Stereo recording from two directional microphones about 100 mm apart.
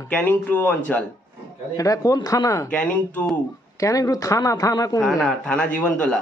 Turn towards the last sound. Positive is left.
turn(degrees=10)  # may be behind; listen again after turning